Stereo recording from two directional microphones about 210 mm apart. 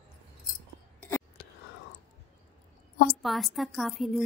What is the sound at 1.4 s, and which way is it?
Whispering, 45° left (ahead or behind).